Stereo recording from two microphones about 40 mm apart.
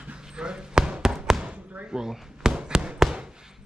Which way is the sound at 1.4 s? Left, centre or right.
Right.